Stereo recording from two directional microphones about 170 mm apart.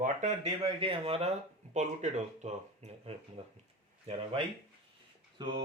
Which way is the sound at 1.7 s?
45° right (ahead or behind).